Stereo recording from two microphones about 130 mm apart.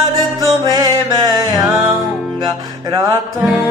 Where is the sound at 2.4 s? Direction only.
30° right (ahead or behind).